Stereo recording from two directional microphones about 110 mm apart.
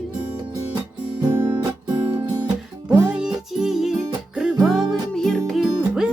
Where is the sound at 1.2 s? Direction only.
45° right (ahead or behind).